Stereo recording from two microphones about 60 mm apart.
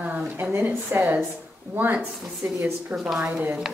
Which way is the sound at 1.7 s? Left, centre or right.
Right.